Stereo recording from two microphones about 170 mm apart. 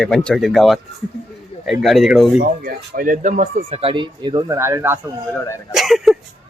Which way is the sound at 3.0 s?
50° right (ahead or behind).